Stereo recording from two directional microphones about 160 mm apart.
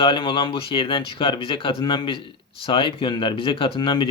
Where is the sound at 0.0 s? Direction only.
30° left (ahead or behind).